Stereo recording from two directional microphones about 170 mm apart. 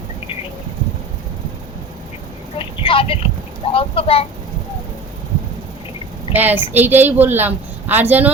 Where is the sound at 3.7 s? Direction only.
35° left (ahead or behind).